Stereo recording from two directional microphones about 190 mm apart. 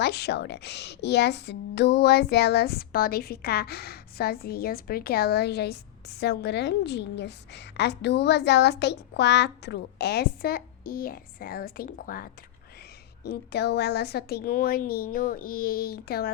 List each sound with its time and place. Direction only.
0.0 s a woman's voice: 60° left (ahead or behind)